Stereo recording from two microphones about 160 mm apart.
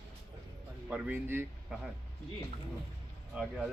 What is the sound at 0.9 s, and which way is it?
Speech, 10° right (ahead or behind).